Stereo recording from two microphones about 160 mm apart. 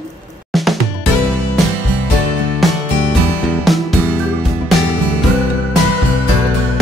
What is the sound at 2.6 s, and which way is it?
Music, centre (ahead or behind).